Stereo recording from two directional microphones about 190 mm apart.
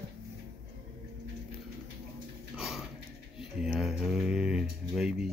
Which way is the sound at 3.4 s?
Centre (ahead or behind).